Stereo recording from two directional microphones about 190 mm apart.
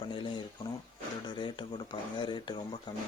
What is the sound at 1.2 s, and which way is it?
Speech, 25° left (ahead or behind).